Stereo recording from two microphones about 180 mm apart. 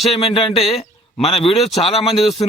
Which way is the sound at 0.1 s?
30° left (ahead or behind).